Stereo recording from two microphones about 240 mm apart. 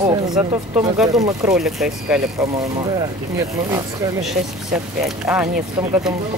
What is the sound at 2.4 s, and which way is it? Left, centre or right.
Speech, centre.